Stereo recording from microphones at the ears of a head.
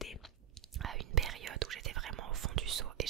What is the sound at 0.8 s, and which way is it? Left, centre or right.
Whispering, right.